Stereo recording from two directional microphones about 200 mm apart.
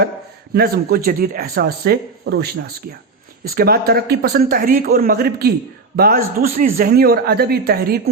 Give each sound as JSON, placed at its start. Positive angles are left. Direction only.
{"t": 0.5, "sound": "a man's voice", "side_deg": -50}